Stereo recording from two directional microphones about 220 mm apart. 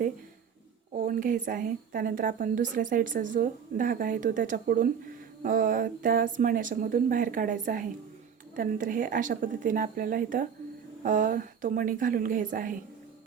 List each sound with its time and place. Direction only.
0.9 s a woman's voice: 40° right (ahead or behind)